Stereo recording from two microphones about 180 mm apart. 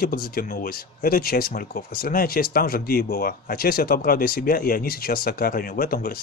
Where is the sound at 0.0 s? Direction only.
55° left (ahead or behind).